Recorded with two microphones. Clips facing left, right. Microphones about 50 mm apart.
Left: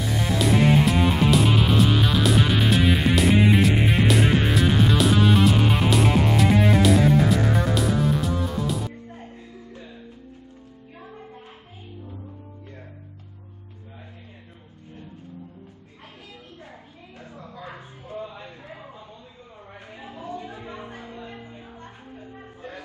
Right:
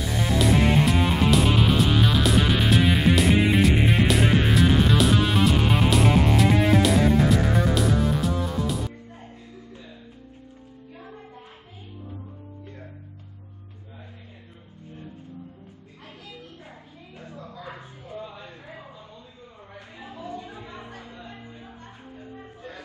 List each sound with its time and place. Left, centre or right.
0.0 s music: centre
17.2 s a sound: left
20.0 s music: left